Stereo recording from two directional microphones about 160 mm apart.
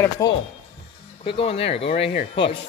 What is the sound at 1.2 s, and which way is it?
Speech, 35° left (ahead or behind).